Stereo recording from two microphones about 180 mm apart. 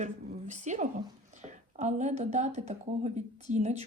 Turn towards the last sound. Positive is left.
turn(degrees=-40)  # may be behind; listen again after turning